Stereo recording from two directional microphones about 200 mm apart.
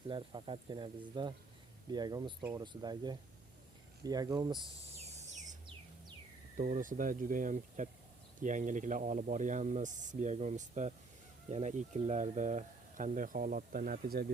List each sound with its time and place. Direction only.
0.1 s speech: 25° right (ahead or behind)
5.2 s bird: 35° right (ahead or behind)
6.6 s speech: 40° right (ahead or behind)